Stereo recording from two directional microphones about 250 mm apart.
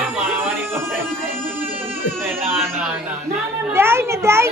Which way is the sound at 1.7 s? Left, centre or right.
Right.